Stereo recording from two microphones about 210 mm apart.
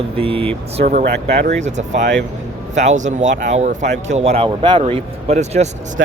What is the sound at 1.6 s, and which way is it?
Speech, 35° right (ahead or behind).